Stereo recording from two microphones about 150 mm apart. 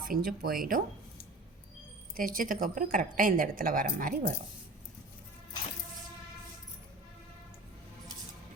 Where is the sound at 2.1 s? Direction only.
65° right (ahead or behind).